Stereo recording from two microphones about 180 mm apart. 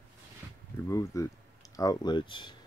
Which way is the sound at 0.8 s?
15° left (ahead or behind).